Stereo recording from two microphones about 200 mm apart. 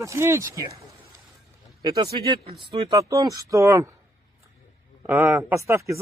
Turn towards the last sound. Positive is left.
turn(degrees=-15)  # may be behind; listen again after turning